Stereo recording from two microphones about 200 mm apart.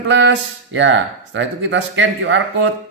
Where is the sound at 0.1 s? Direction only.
65° right (ahead or behind).